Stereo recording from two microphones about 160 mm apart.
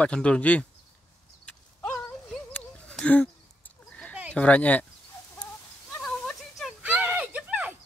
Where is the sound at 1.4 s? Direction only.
5° left (ahead or behind).